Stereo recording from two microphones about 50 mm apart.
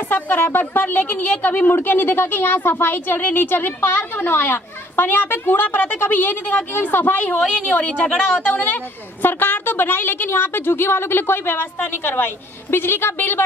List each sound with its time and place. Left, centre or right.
0.1 s a woman's voice: left
8.5 s a woman's voice: left